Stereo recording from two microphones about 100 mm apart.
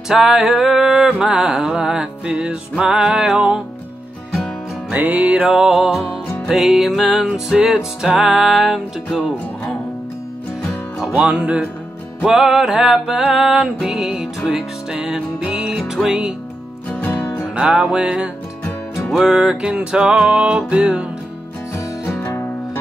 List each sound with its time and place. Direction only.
0.1 s music: 5° right (ahead or behind)
4.9 s music: 15° right (ahead or behind)
10.6 s music: centre (ahead or behind)
11.1 s music: 15° right (ahead or behind)
16.9 s music: 25° left (ahead or behind)
17.6 s music: 10° right (ahead or behind)
21.7 s music: 25° left (ahead or behind)